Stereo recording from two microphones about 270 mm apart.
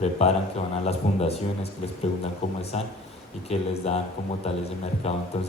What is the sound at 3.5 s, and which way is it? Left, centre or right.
Speech, left.